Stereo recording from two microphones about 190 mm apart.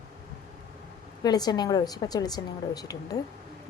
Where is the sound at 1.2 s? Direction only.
20° left (ahead or behind).